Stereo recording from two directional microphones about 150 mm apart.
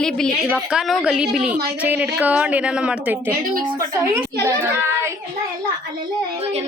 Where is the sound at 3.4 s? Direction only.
65° right (ahead or behind).